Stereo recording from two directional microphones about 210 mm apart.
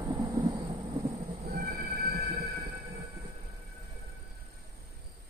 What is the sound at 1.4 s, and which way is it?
Train, 50° right (ahead or behind).